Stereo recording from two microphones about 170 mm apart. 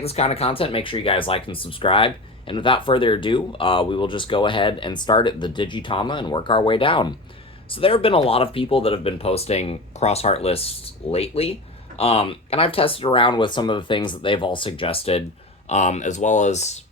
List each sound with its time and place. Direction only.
0.0 s speech: 35° left (ahead or behind)